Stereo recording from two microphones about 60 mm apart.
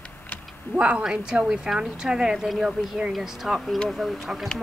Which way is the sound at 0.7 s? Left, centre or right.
Centre.